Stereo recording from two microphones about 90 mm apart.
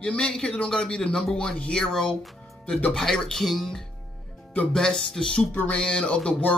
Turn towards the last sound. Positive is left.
turn(degrees=10)  # may be behind; listen again after turning